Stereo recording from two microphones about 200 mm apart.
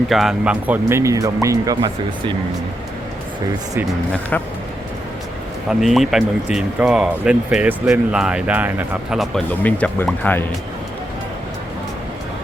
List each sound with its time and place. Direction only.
0.1 s speech: centre (ahead or behind); by 2.3 s 20° right (ahead or behind)
5.8 s speech: centre (ahead or behind)